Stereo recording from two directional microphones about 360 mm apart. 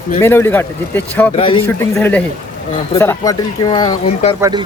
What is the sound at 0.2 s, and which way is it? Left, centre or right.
A man's voice, centre.